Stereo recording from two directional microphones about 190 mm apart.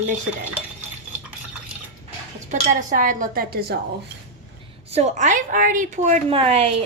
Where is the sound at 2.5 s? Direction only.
40° right (ahead or behind).